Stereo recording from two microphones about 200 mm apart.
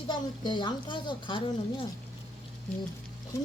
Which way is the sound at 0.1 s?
20° left (ahead or behind).